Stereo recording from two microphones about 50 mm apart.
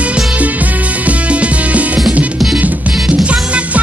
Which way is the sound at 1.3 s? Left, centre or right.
Right.